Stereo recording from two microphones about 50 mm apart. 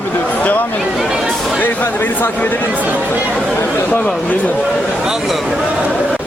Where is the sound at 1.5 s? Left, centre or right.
Left.